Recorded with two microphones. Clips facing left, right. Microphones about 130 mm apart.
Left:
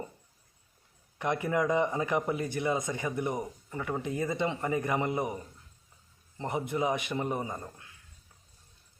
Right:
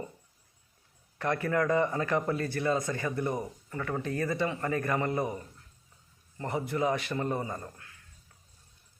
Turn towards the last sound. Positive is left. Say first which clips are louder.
# even
turn(degrees=15)  # may be behind; listen again after turning